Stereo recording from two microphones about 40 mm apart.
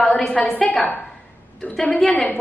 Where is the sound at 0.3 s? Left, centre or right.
Left.